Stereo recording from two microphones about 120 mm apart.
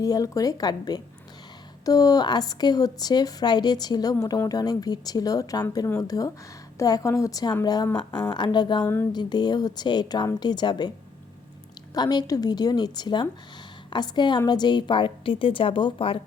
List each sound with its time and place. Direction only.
0.0 s a woman's voice: 30° left (ahead or behind)
8.8 s a woman's voice: 20° left (ahead or behind)
9.1 s a woman's voice: 35° left (ahead or behind)
11.9 s a woman's voice: 35° left (ahead or behind)